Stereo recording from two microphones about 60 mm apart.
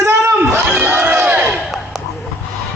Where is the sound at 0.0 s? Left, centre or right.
Right.